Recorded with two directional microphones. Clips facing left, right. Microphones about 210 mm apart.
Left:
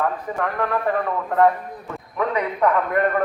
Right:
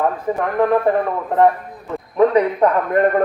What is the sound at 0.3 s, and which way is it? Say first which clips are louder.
Speech: right 9 dB; 30° right (ahead or behind).